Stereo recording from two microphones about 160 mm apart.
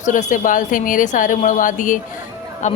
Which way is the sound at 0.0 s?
50° left (ahead or behind).